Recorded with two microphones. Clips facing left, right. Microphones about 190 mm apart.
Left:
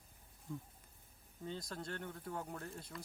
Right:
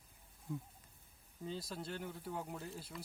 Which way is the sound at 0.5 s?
5° right (ahead or behind).